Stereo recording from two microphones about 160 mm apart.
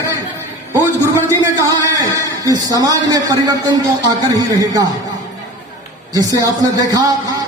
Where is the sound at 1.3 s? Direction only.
20° right (ahead or behind).